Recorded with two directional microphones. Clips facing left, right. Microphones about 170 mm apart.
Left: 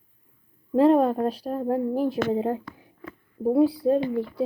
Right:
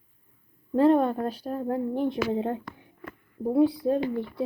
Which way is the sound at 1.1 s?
30° left (ahead or behind).